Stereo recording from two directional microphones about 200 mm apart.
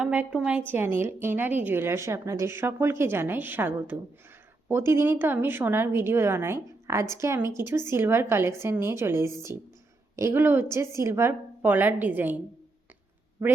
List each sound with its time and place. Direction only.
0.0 s a woman's voice: 5° right (ahead or behind)